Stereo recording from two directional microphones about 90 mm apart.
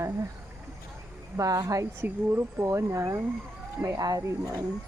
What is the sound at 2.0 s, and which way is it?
Speech, 25° right (ahead or behind).